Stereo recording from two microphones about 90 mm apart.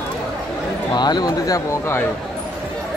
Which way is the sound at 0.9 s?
50° left (ahead or behind).